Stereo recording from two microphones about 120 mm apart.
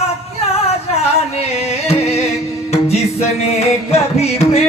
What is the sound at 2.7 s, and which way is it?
Music, 60° left (ahead or behind).